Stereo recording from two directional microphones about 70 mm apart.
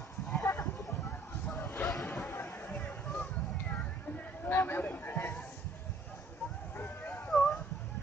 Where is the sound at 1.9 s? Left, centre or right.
Centre.